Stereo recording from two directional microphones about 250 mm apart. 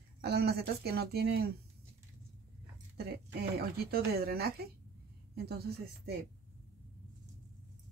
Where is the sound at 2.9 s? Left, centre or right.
Right.